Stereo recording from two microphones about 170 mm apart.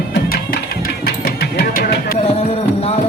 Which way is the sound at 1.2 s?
60° left (ahead or behind).